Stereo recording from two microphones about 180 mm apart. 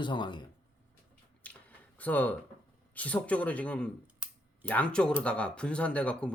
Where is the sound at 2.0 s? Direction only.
10° left (ahead or behind).